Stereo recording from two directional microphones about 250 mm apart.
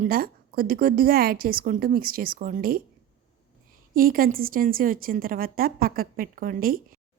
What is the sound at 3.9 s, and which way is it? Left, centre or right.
A woman's voice, right.